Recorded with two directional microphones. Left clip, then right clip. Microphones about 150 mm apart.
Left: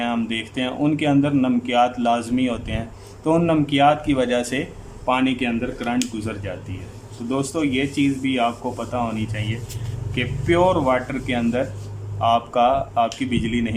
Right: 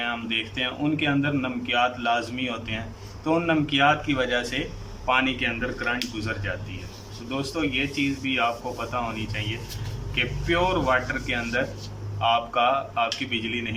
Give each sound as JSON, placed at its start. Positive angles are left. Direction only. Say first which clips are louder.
{"t": 0.0, "sound": "a man's voice", "louder": "left 2 dB", "side_deg": 30}
{"t": 7.3, "sound": "a man's voice", "louder": "left 5 dB", "side_deg": 35}